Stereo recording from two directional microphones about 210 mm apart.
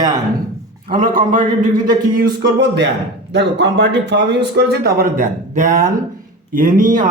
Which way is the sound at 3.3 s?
55° right (ahead or behind).